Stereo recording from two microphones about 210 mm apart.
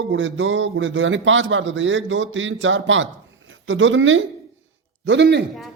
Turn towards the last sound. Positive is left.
turn(degrees=-55)  # may be behind; listen again after turning